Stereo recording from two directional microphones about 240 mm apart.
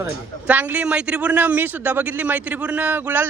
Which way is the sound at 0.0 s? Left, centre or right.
Centre.